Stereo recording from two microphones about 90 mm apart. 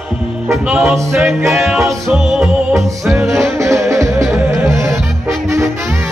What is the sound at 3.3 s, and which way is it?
Music, 35° right (ahead or behind).